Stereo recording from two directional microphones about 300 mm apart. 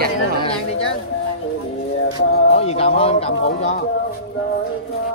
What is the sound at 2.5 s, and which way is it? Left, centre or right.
A man's voice, centre.